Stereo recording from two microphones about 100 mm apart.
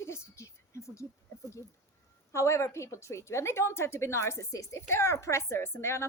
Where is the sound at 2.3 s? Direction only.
30° left (ahead or behind).